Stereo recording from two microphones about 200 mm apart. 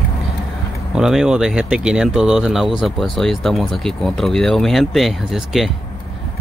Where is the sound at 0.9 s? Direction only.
5° right (ahead or behind).